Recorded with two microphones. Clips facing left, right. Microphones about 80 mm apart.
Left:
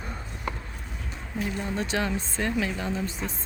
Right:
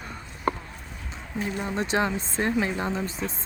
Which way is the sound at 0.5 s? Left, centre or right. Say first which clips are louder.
Right 7 dB; right.